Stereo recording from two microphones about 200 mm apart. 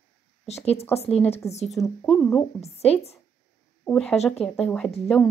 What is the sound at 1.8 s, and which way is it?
Speech, 10° left (ahead or behind).